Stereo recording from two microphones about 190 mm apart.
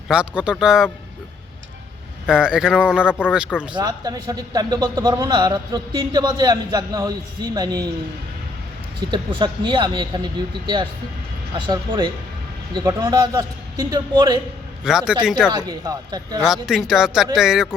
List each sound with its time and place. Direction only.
0.1 s speech: 5° right (ahead or behind)
2.2 s speech: 5° right (ahead or behind)
3.1 s speech: 10° left (ahead or behind)
3.8 s speech: 20° right (ahead or behind)
9.0 s speech: 25° right (ahead or behind)
11.5 s speech: 25° right (ahead or behind)
14.8 s speech: 5° right (ahead or behind)
15.5 s speech: 20° right (ahead or behind)
16.4 s speech: centre (ahead or behind)